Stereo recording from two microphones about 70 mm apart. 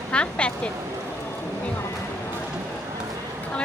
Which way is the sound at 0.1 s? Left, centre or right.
Centre.